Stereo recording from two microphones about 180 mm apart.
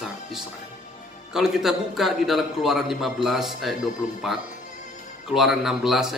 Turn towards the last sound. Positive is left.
turn(degrees=0)  # may be behind; listen again after turning